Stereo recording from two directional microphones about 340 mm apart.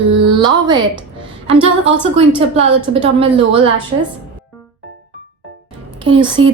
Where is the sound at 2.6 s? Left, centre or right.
Centre.